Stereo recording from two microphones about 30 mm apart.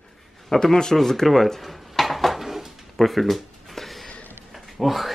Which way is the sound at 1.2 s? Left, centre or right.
Centre.